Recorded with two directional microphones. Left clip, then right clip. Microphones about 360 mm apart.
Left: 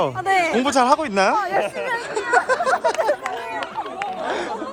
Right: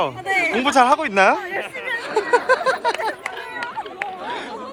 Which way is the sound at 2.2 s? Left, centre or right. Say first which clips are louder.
Right 2 dB; centre.